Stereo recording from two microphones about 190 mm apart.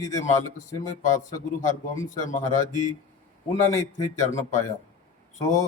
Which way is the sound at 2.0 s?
40° left (ahead or behind).